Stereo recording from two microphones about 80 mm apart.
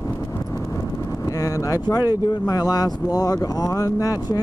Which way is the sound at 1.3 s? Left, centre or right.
Left.